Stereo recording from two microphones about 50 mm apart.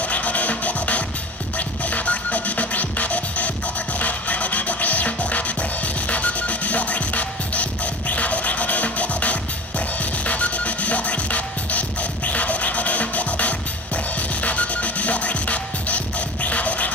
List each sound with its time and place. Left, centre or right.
0.1 s music: left
16.4 s scratching: left